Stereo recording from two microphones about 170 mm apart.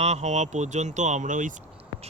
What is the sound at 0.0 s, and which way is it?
Speech, 40° right (ahead or behind).